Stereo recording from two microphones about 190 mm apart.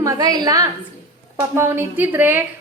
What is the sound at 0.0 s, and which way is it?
A woman's voice, 20° right (ahead or behind).